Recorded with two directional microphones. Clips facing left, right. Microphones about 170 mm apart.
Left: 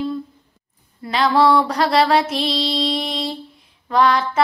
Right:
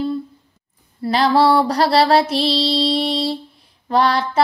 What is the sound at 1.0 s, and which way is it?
Music, 35° right (ahead or behind).